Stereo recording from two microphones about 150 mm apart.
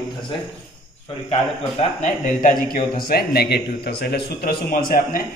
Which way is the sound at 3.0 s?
90° left.